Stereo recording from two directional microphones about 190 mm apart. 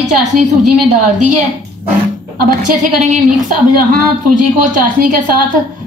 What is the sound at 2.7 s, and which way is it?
Speech, 40° right (ahead or behind).